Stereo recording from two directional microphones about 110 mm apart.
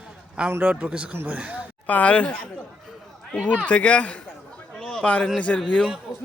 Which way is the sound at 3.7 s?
10° left (ahead or behind).